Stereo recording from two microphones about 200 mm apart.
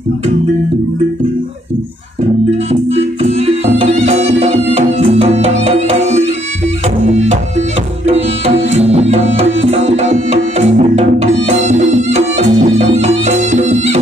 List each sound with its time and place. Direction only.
2.7 s music: 30° right (ahead or behind)
8.7 s music: 30° right (ahead or behind)